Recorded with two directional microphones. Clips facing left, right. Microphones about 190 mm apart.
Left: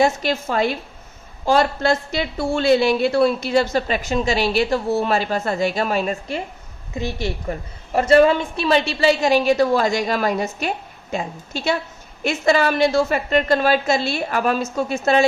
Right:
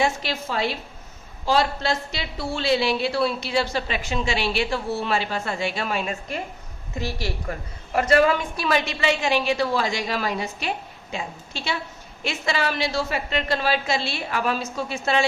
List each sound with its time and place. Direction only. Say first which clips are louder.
0.0 s a woman's voice: left 6 dB; 45° left (ahead or behind)
7.0 s a woman's voice: left 4 dB; 20° left (ahead or behind); by 15.3 s 45° left (ahead or behind)